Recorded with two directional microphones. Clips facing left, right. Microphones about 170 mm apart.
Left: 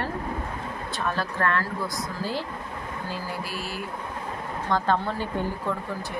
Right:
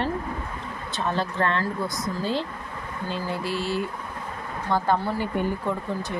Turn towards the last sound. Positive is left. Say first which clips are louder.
# right 2 dB
turn(degrees=-15)  # may be behind; listen again after turning